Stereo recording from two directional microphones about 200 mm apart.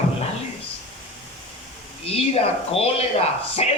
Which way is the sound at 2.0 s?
30° left (ahead or behind).